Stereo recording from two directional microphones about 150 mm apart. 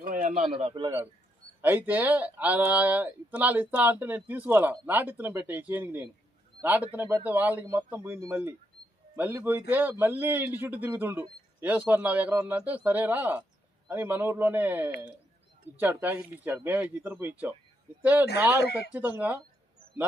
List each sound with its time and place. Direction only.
0.0 s a sound: 65° right (ahead or behind)
0.4 s a man's voice: 35° right (ahead or behind)
1.6 s a man's voice: 10° right (ahead or behind)